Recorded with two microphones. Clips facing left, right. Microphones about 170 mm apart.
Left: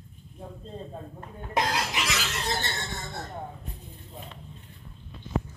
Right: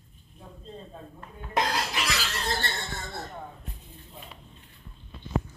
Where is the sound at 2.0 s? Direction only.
20° left (ahead or behind).